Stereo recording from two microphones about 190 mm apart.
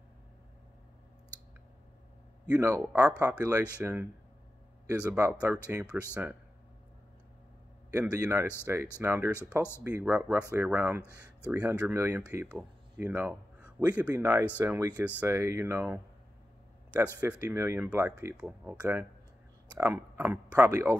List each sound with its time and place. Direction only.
2.5 s speech: 10° right (ahead or behind)
7.9 s speech: 10° right (ahead or behind)